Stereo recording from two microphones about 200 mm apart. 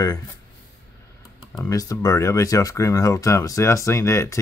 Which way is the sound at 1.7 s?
15° left (ahead or behind).